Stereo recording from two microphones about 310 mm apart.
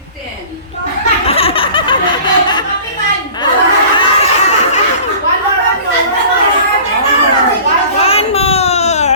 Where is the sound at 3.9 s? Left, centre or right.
Centre.